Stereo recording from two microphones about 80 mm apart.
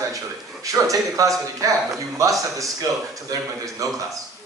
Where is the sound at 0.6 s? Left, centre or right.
Right.